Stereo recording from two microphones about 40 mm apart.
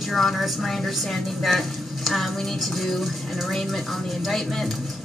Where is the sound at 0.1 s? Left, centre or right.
Centre.